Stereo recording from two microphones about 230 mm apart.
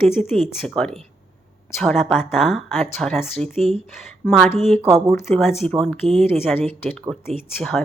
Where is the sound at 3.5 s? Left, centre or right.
Right.